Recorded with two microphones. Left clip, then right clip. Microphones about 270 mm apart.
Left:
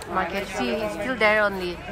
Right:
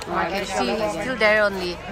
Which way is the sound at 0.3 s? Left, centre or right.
Centre.